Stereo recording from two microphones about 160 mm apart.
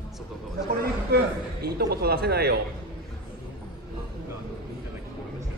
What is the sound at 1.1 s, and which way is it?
Speech, 85° right.